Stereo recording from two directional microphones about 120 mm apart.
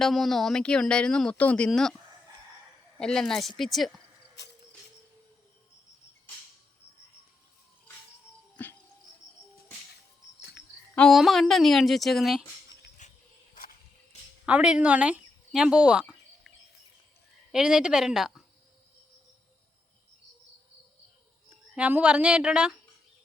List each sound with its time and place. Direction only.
0.0 s speech: centre (ahead or behind)
3.0 s speech: 5° left (ahead or behind)
8.6 s music: 15° left (ahead or behind)
10.9 s speech: 5° left (ahead or behind)
13.0 s a sound: 90° left
14.4 s speech: 10° right (ahead or behind)
17.5 s speech: 5° right (ahead or behind)
21.8 s a woman's voice: 10° right (ahead or behind)